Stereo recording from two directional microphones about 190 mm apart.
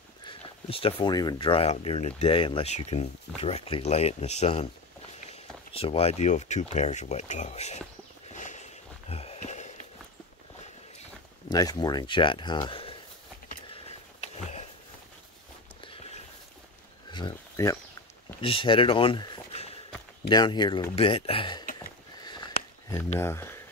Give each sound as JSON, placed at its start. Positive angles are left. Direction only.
{"t": 0.2, "sound": "speech", "side_deg": 30}
{"t": 5.7, "sound": "speech", "side_deg": 30}
{"t": 8.3, "sound": "walk", "side_deg": 40}
{"t": 9.1, "sound": "a sound", "side_deg": 30}
{"t": 11.5, "sound": "speech", "side_deg": 20}
{"t": 13.7, "sound": "a sound", "side_deg": 35}
{"t": 17.1, "sound": "a sound", "side_deg": 20}
{"t": 18.4, "sound": "speech", "side_deg": 25}
{"t": 23.1, "sound": "speech", "side_deg": 15}